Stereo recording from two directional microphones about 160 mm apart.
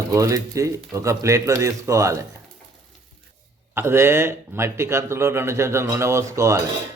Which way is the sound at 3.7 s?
15° right (ahead or behind).